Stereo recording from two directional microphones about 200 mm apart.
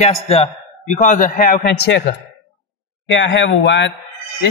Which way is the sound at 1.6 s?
55° left (ahead or behind).